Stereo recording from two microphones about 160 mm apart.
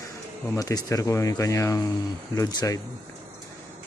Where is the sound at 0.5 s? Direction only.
20° left (ahead or behind).